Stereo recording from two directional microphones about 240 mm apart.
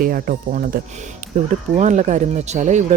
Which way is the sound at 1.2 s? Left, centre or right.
Right.